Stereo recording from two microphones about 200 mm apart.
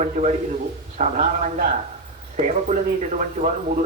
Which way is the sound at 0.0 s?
35° right (ahead or behind).